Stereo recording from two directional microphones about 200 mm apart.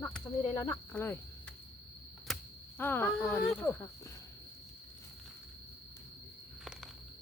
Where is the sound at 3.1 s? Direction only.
Centre (ahead or behind).